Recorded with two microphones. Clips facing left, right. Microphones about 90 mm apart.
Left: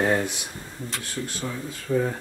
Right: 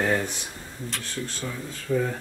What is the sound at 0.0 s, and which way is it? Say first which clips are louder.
Speech: left 2 dB; 20° left (ahead or behind).